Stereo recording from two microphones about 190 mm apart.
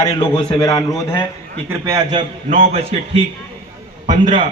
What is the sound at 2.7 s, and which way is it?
A man's voice, 30° right (ahead or behind).